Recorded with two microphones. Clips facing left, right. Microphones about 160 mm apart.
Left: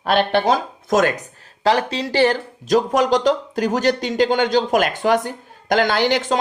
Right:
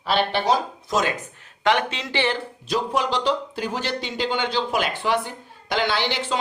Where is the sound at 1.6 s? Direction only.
35° left (ahead or behind).